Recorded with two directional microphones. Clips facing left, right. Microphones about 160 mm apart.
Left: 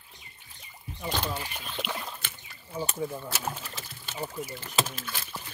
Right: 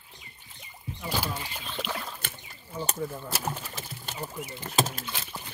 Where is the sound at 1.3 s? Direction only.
10° left (ahead or behind).